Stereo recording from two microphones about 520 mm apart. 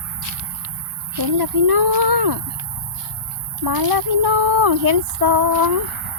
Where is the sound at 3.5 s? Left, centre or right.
Right.